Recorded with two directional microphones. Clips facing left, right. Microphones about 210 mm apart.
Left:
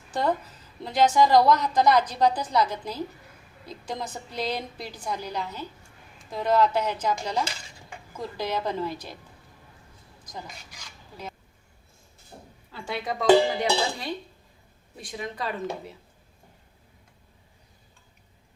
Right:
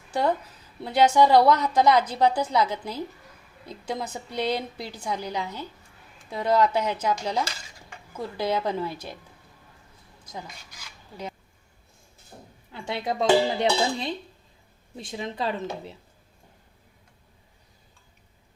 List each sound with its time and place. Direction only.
0.1 s a woman's voice: 10° right (ahead or behind)
12.7 s dishes: 20° right (ahead or behind)